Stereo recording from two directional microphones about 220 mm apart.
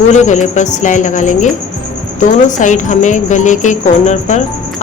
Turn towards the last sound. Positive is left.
turn(degrees=30)  # may be behind; listen again after turning